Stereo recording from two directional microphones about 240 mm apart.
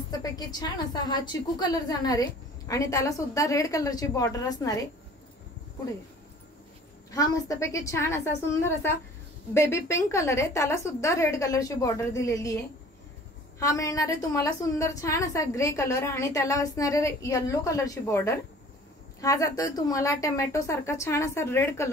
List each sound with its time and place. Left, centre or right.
0.2 s a woman's voice: centre
7.1 s a woman's voice: centre
13.6 s a woman's voice: centre